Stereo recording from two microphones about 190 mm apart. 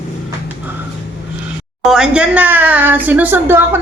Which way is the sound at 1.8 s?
5° right (ahead or behind).